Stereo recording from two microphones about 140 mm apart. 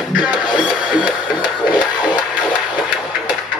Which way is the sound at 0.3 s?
30° left (ahead or behind).